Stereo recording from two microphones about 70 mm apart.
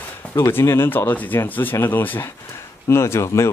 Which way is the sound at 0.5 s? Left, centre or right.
Left.